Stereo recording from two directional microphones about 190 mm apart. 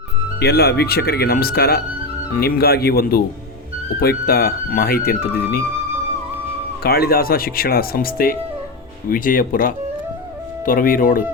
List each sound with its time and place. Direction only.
0.3 s speech: 60° left (ahead or behind)
6.8 s speech: 55° left (ahead or behind)